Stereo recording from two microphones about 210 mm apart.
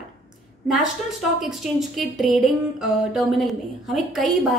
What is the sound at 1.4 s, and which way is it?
Speech, centre (ahead or behind).